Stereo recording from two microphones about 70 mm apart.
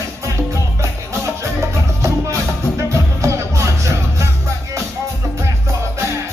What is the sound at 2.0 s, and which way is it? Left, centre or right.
Music, right.